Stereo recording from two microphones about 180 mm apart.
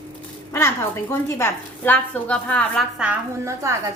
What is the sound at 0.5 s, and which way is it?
A woman's voice, 15° left (ahead or behind).